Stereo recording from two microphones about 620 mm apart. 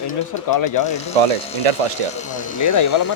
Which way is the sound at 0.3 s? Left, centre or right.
Left.